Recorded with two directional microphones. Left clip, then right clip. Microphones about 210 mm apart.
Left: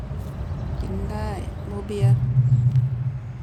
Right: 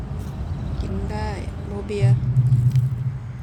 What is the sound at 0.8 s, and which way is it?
Vehicle, 15° left (ahead or behind).